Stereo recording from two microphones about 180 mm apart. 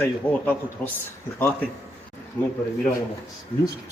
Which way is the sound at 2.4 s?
10° left (ahead or behind).